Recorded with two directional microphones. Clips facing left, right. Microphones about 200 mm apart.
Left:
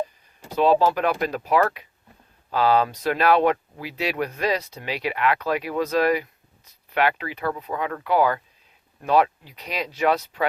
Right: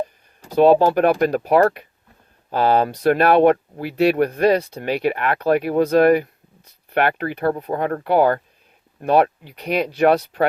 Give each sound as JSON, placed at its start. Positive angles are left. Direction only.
{"t": 0.5, "sound": "speech", "side_deg": -55}